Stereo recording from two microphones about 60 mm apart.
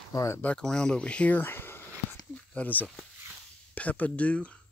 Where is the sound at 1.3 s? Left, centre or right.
Left.